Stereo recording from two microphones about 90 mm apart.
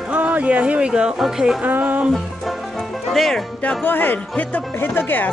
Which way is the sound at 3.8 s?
20° left (ahead or behind).